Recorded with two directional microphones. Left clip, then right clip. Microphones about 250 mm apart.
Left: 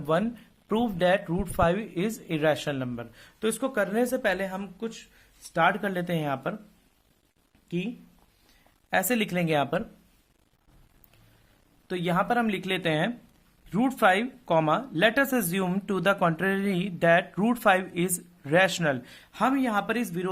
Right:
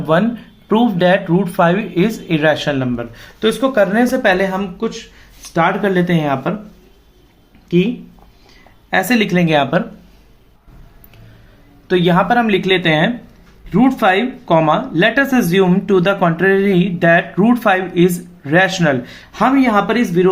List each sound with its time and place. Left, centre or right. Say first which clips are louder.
0.0 s speech: right 12 dB; left
8.9 s speech: right 11 dB; left
11.9 s speech: right 13 dB; left